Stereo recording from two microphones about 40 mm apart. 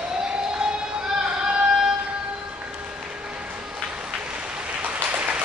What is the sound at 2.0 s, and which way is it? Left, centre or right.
Music, right.